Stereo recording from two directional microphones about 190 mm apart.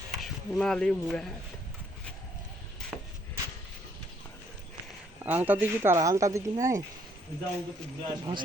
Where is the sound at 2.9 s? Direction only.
5° right (ahead or behind).